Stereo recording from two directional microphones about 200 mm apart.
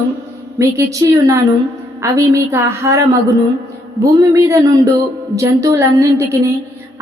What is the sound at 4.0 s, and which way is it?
A woman's voice, 15° right (ahead or behind).